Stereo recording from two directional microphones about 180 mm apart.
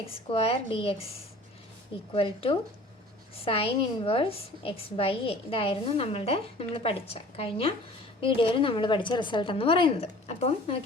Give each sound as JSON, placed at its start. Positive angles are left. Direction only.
{"t": 0.3, "sound": "a woman's voice", "side_deg": 30}
{"t": 2.1, "sound": "a woman's voice", "side_deg": 30}